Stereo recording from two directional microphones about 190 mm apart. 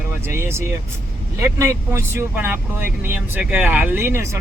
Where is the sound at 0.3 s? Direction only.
15° right (ahead or behind).